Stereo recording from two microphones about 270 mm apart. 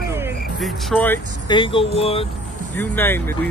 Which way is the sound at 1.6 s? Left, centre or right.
Centre.